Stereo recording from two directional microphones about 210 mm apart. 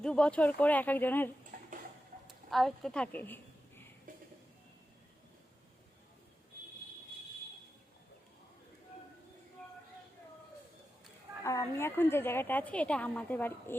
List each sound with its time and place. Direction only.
0.0 s a woman's voice: 5° left (ahead or behind)
1.5 s tick-tock: 40° right (ahead or behind)
2.2 s a sound: centre (ahead or behind)
11.4 s a woman's voice: 10° left (ahead or behind)